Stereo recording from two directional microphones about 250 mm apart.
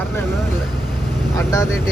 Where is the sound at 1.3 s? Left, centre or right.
Centre.